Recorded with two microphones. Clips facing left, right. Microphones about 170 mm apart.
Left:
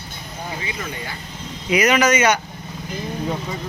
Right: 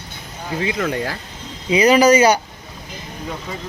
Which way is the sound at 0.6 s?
75° right (ahead or behind).